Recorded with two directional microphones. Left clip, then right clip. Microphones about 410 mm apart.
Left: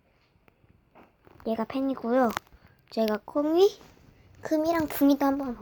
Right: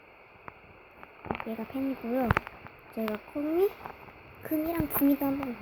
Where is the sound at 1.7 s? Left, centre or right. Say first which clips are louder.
Left 4 dB; centre.